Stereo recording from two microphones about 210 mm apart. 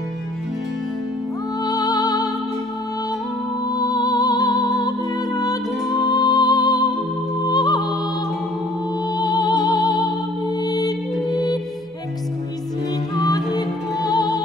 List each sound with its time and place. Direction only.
1.6 s music: 15° left (ahead or behind)
3.6 s music: 20° left (ahead or behind)
9.1 s music: 20° left (ahead or behind)
13.2 s music: 20° left (ahead or behind)